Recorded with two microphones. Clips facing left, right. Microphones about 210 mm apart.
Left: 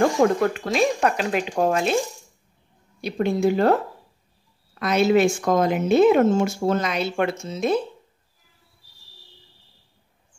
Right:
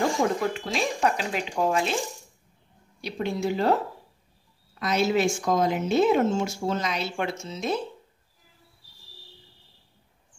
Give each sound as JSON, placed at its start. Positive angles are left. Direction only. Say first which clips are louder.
{"t": 0.0, "sound": "speech", "louder": "left 6 dB", "side_deg": 60}
{"t": 3.0, "sound": "a woman's voice", "louder": "left 7 dB", "side_deg": 50}